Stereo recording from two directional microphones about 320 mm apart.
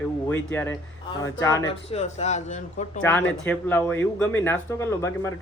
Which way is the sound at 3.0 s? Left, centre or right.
Centre.